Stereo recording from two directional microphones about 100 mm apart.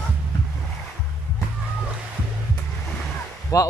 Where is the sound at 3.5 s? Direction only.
35° left (ahead or behind).